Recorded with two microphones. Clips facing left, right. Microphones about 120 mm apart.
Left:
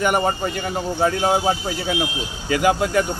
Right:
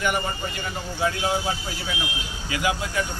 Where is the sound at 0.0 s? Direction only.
50° left (ahead or behind).